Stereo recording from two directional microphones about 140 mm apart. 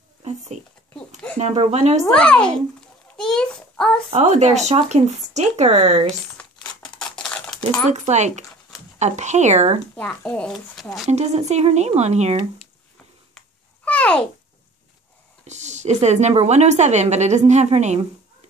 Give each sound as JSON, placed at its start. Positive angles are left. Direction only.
{"t": 0.9, "sound": "a sound", "side_deg": 10}
{"t": 1.4, "sound": "speech", "side_deg": -50}
{"t": 2.1, "sound": "a child's voice", "side_deg": 5}
{"t": 4.1, "sound": "speech", "side_deg": -55}
{"t": 6.0, "sound": "crumpling", "side_deg": 5}
{"t": 7.0, "sound": "typing", "side_deg": 5}
{"t": 7.9, "sound": "a woman's voice", "side_deg": -55}
{"t": 9.9, "sound": "speech", "side_deg": 10}
{"t": 11.1, "sound": "speech", "side_deg": -50}
{"t": 13.8, "sound": "a sound", "side_deg": 10}
{"t": 15.4, "sound": "a woman's voice", "side_deg": -55}